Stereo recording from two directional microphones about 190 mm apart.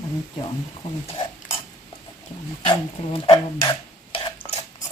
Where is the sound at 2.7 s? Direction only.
25° left (ahead or behind).